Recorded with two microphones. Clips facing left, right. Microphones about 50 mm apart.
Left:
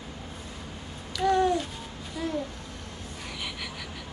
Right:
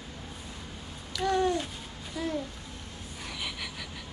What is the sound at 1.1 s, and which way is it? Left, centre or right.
Babbling, centre.